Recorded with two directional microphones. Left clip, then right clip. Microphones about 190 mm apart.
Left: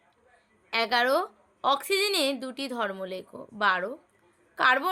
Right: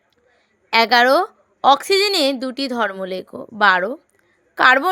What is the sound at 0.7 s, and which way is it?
A woman's voice, 45° right (ahead or behind).